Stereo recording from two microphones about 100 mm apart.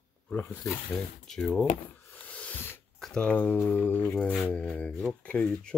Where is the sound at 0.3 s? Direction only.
20° left (ahead or behind).